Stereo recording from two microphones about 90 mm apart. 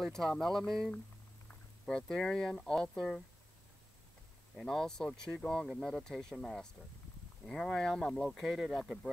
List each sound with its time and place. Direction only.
0.0 s speech: 5° left (ahead or behind)
4.6 s speech: 5° left (ahead or behind)